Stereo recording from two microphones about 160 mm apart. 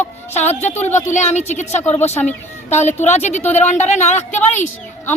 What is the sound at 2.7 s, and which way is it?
A woman's voice, 45° left (ahead or behind).